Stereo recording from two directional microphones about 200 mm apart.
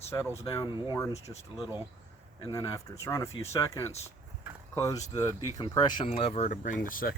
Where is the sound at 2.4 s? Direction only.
15° left (ahead or behind).